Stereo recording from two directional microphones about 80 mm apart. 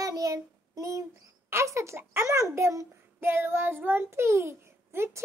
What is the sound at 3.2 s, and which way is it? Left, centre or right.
A child's voice, right.